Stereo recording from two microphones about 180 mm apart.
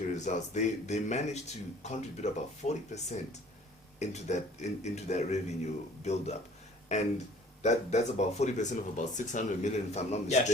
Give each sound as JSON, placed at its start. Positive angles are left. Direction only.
{"t": 0.1, "sound": "speech", "side_deg": 40}